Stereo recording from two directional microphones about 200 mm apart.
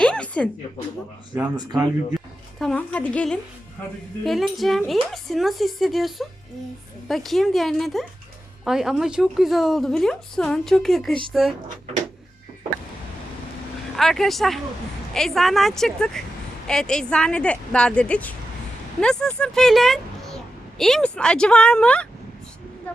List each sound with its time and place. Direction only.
0.0 s a sound: 5° left (ahead or behind)
1.5 s speech: 20° right (ahead or behind)
2.6 s a woman's voice: 5° left (ahead or behind)
13.9 s a woman's voice: centre (ahead or behind)